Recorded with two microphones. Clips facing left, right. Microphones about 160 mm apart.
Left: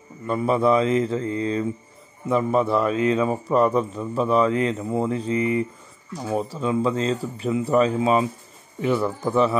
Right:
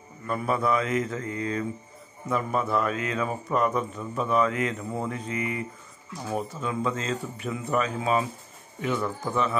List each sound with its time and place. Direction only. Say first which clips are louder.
0.3 s mantra: left 6 dB; 25° left (ahead or behind)
2.2 s speech: left 7 dB; 25° left (ahead or behind)